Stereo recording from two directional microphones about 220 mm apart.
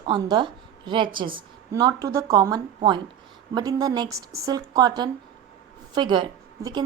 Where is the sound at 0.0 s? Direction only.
20° right (ahead or behind).